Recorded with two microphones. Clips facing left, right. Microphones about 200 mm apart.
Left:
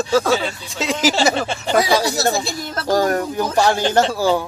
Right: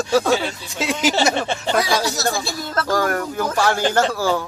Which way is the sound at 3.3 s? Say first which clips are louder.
Left 2 dB; 15° left (ahead or behind).